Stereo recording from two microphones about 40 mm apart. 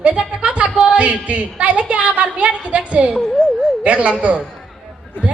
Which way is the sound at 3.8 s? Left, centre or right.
Right.